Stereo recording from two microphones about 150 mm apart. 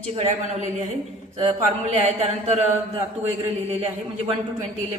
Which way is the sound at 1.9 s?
45° right (ahead or behind).